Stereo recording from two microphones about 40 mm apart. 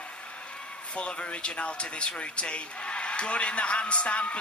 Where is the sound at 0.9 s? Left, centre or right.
Left.